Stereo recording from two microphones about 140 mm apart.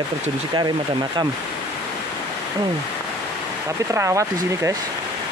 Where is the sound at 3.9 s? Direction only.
20° right (ahead or behind).